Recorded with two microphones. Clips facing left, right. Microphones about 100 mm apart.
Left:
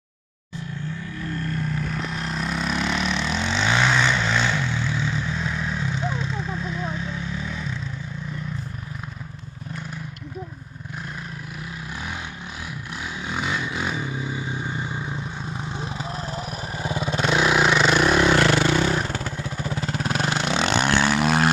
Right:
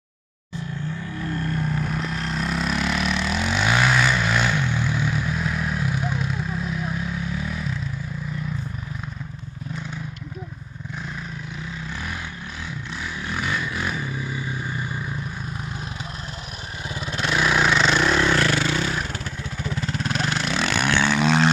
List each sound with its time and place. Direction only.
2.0 s vehicle: centre (ahead or behind)
13.0 s vehicle: 20° left (ahead or behind)
19.8 s vehicle: 30° left (ahead or behind); by 21.5 s 10° left (ahead or behind)